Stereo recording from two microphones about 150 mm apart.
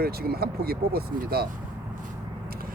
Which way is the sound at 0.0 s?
90° right.